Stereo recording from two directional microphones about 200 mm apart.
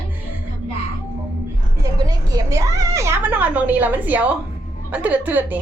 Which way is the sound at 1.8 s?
20° right (ahead or behind).